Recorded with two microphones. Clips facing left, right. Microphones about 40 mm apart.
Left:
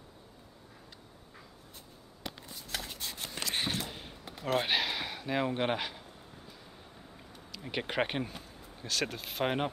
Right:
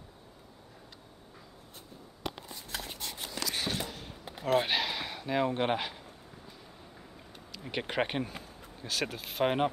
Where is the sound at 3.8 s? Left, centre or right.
Centre.